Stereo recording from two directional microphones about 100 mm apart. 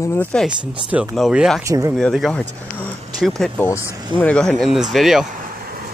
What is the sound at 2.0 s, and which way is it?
Speech, centre (ahead or behind).